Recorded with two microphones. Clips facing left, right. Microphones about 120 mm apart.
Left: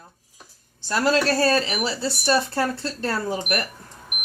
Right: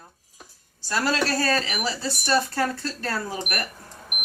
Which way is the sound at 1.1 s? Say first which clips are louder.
Left 5 dB; 30° left (ahead or behind).